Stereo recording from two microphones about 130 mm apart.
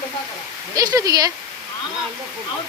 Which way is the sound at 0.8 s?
30° right (ahead or behind).